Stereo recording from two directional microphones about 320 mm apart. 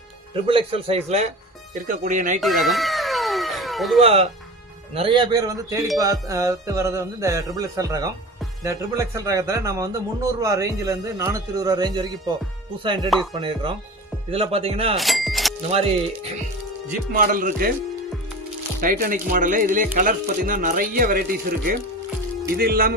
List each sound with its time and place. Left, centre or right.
0.4 s speech: centre
2.4 s cat: centre
4.0 s speech: centre
14.9 s music: centre
15.7 s speech: centre
18.8 s speech: right
22.5 s speech: right